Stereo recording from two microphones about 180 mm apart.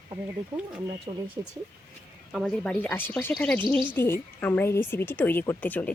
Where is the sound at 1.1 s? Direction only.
30° right (ahead or behind).